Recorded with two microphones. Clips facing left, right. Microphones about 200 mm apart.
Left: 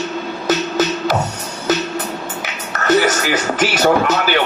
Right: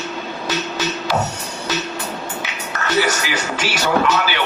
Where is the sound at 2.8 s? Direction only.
45° left (ahead or behind).